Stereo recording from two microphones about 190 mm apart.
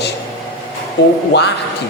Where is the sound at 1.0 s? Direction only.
60° left (ahead or behind).